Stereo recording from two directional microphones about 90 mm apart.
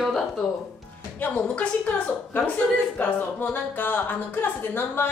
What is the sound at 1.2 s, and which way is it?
A woman's voice, 15° left (ahead or behind).